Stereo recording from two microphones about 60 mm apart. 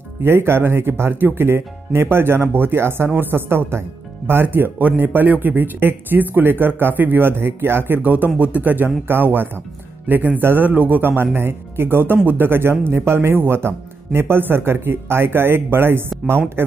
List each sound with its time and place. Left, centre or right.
0.2 s speech: right